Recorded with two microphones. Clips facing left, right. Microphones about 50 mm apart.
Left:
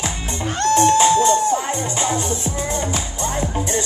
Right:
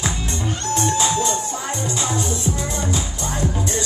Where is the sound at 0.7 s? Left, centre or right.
Left.